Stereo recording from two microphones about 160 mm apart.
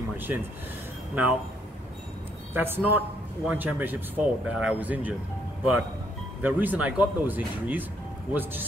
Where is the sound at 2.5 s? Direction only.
10° right (ahead or behind).